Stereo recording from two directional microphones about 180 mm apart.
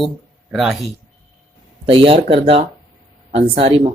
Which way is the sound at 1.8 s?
30° right (ahead or behind).